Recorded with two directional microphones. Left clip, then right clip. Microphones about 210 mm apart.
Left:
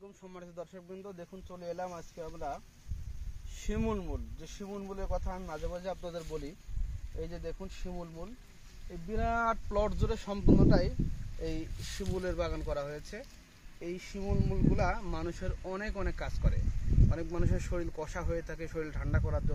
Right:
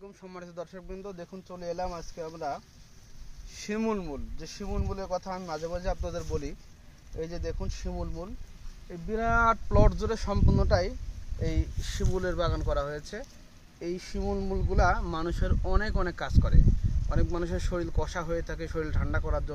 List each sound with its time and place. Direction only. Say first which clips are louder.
0.2 s speech: right 5 dB; centre (ahead or behind)
3.6 s speech: right 5 dB; 5° left (ahead or behind)
12.0 s speech: right 5 dB; 20° left (ahead or behind)
13.7 s speech: right 6 dB; centre (ahead or behind)